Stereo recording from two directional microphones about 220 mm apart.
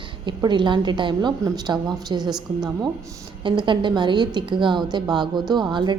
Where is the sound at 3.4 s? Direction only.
20° right (ahead or behind).